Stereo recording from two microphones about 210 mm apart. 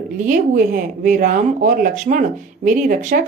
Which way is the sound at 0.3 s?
40° right (ahead or behind).